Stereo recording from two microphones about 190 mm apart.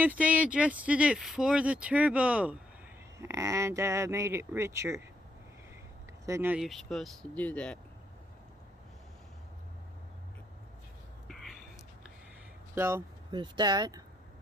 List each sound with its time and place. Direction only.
0.0 s speech: 10° right (ahead or behind)
6.2 s speech: 15° right (ahead or behind); by 7.8 s 5° left (ahead or behind)
11.3 s a sound: centre (ahead or behind)
12.7 s speech: 15° right (ahead or behind)